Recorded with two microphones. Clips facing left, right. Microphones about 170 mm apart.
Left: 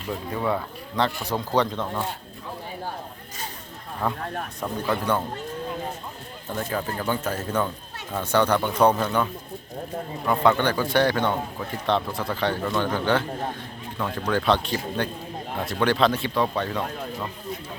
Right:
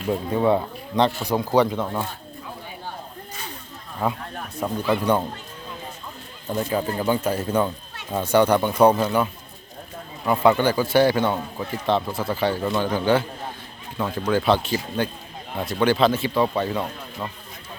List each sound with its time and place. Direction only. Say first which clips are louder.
0.1 s a man's voice: right 6 dB; 25° right (ahead or behind)
4.0 s a man's voice: right 1 dB; 10° right (ahead or behind)
6.5 s a man's voice: right 4 dB; 15° right (ahead or behind)